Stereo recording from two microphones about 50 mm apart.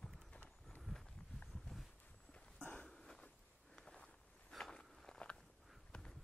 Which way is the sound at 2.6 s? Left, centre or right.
Left.